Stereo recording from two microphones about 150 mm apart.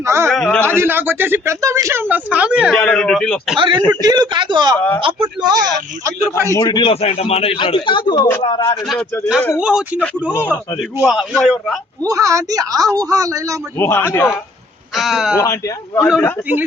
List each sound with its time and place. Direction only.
0.0 s speech: 15° right (ahead or behind)
0.3 s a man's voice: 5° left (ahead or behind)
0.6 s speech: 15° right (ahead or behind)
2.7 s a man's voice: 5° left (ahead or behind)
3.6 s speech: 30° right (ahead or behind)
6.4 s a man's voice: 20° left (ahead or behind)
9.6 s a man's voice: 5° right (ahead or behind)
12.0 s speech: 20° right (ahead or behind)
13.7 s a man's voice: 15° left (ahead or behind)
14.9 s a man's voice: centre (ahead or behind)